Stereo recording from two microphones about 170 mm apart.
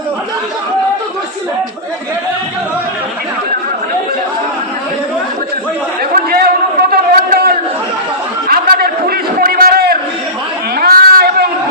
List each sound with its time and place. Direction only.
6.1 s chatter: 60° right (ahead or behind)
6.9 s a sound: 65° right (ahead or behind)
10.8 s chatter: 60° right (ahead or behind)